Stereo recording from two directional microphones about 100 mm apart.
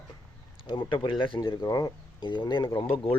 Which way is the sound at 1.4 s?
40° left (ahead or behind).